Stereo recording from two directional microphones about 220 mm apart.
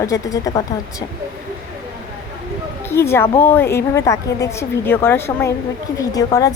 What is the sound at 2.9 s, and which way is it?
A woman's voice, 10° left (ahead or behind).